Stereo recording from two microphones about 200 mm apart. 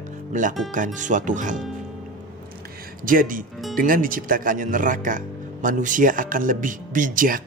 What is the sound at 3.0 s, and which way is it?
Speech, 45° right (ahead or behind).